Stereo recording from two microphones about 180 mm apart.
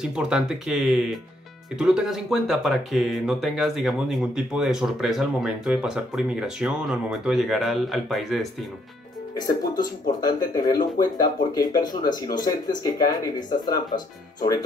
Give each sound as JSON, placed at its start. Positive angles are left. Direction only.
{"t": 0.0, "sound": "speech", "side_deg": -5}
{"t": 9.8, "sound": "speech", "side_deg": 20}